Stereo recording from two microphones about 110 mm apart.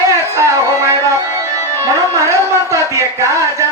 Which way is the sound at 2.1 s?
25° right (ahead or behind).